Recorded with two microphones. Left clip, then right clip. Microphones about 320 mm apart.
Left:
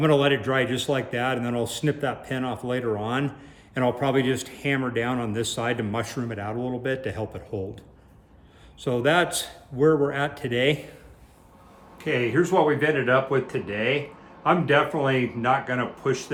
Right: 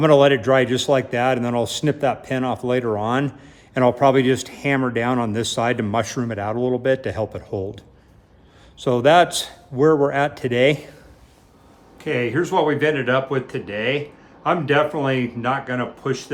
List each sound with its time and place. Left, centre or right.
0.0 s speech: centre
11.9 s speech: centre